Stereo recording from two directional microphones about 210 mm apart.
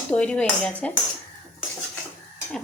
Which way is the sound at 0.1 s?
5° left (ahead or behind).